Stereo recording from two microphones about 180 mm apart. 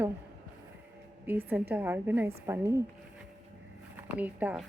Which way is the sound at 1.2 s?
10° right (ahead or behind).